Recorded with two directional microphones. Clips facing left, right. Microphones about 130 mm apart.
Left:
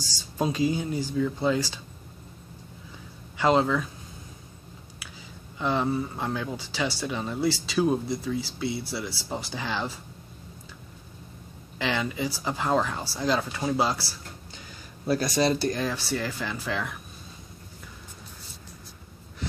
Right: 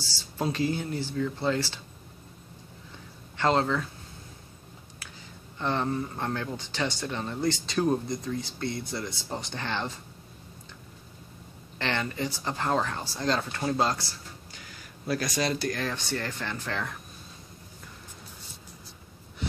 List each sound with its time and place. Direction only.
0.0 s speech: 15° left (ahead or behind)
3.3 s speech: 10° left (ahead or behind)
5.6 s speech: 5° left (ahead or behind)
11.8 s speech: 5° left (ahead or behind)
15.0 s speech: 30° left (ahead or behind)
15.8 s speech: 5° left (ahead or behind)